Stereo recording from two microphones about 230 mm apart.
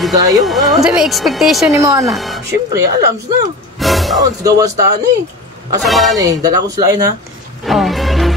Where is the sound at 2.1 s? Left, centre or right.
Centre.